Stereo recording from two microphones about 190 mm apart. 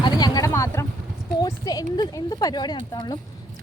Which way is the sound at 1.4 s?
20° left (ahead or behind).